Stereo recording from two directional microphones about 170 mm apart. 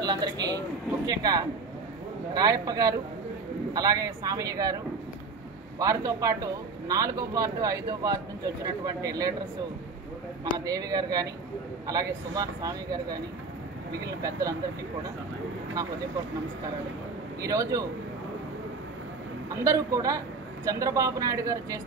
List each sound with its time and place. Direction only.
0.0 s speech: 25° right (ahead or behind)
5.8 s speech: 20° right (ahead or behind)
10.4 s speech: 20° right (ahead or behind)
14.0 s speech: 20° right (ahead or behind)
17.4 s speech: 20° right (ahead or behind)
19.5 s speech: 20° right (ahead or behind)